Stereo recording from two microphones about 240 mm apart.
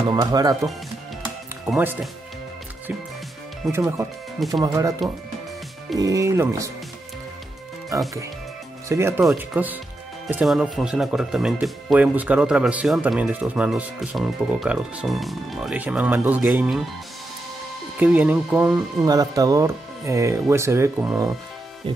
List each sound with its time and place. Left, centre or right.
0.1 s speech: centre
1.7 s speech: centre
3.6 s speech: centre
5.9 s speech: centre
7.9 s speech: centre
17.9 s speech: centre
21.8 s music: right